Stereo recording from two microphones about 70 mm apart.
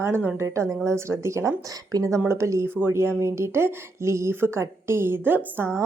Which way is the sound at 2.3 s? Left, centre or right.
Right.